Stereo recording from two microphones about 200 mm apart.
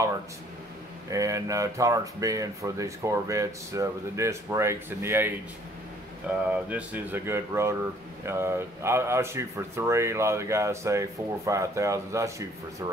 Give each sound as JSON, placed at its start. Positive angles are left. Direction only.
{"t": 1.1, "sound": "speech", "side_deg": -15}
{"t": 6.7, "sound": "speech", "side_deg": -10}